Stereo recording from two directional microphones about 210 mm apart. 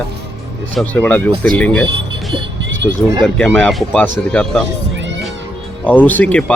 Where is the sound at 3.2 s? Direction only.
5° left (ahead or behind).